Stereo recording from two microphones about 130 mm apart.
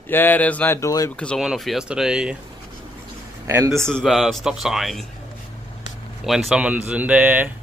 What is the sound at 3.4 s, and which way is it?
Speech, 20° right (ahead or behind).